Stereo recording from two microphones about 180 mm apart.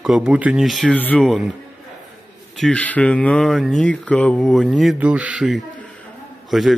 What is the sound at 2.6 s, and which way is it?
Speech, 5° left (ahead or behind).